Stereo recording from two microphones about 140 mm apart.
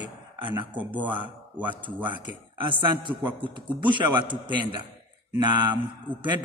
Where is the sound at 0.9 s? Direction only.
10° right (ahead or behind).